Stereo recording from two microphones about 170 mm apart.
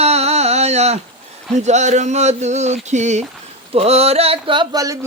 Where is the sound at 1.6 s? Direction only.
45° right (ahead or behind).